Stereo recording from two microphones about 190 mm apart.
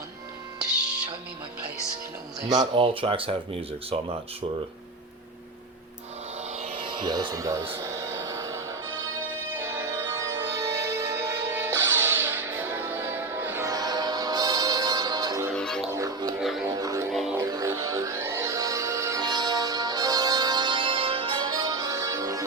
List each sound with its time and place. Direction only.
2.5 s speech: 25° right (ahead or behind)
6.5 s music: 30° right (ahead or behind)
7.8 s a sound: 15° right (ahead or behind)
9.6 s music: 15° right (ahead or behind)
15.5 s music: 5° left (ahead or behind)
15.9 s music: 15° right (ahead or behind)
16.4 s music: centre (ahead or behind)
16.6 s music: 20° right (ahead or behind)
17.1 s music: centre (ahead or behind)
17.3 s music: 15° right (ahead or behind)